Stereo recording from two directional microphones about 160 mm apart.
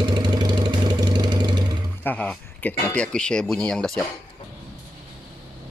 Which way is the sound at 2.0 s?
10° left (ahead or behind).